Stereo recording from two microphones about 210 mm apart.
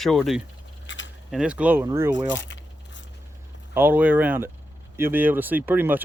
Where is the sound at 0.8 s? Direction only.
60° left (ahead or behind).